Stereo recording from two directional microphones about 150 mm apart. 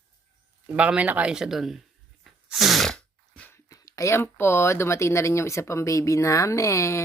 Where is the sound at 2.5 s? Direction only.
Centre (ahead or behind).